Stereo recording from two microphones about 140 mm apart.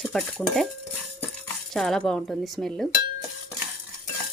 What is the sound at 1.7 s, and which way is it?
Speech, centre (ahead or behind).